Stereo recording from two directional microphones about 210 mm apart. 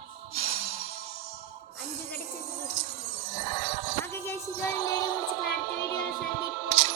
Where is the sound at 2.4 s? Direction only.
30° right (ahead or behind).